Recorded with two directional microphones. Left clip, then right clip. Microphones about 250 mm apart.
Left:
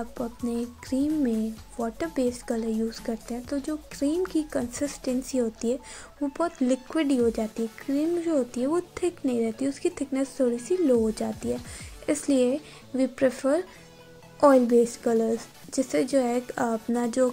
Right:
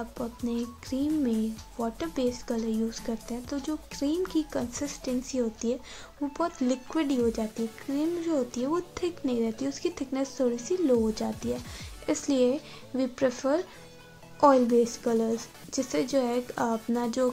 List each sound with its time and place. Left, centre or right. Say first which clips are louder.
0.2 s speech: left 2 dB; centre